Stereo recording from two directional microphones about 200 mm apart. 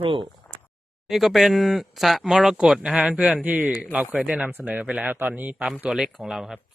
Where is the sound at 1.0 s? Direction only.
Centre (ahead or behind).